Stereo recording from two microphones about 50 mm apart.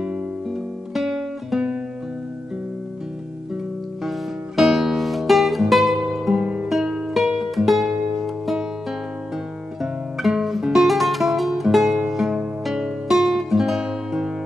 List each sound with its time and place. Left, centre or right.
0.5 s guitar: centre
4.0 s music: centre
6.3 s music: centre
6.7 s music: centre
9.8 s guitar: centre
10.7 s music: centre